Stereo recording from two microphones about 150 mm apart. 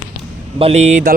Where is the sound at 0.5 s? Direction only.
45° right (ahead or behind).